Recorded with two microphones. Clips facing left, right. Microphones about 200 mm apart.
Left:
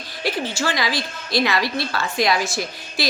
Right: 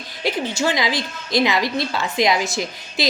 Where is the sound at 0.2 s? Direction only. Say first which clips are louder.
Right 2 dB; 20° right (ahead or behind).